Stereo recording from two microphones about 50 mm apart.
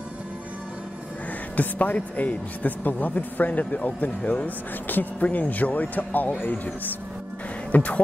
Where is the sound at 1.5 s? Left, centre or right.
Left.